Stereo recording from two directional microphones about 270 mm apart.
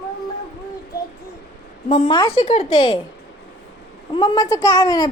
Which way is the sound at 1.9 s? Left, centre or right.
Centre.